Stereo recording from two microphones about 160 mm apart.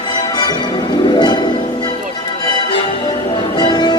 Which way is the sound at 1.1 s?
30° left (ahead or behind).